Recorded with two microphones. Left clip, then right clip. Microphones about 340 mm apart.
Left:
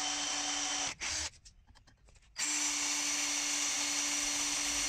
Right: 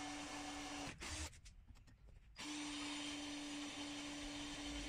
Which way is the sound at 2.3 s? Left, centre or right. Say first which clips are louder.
Left 13 dB; left.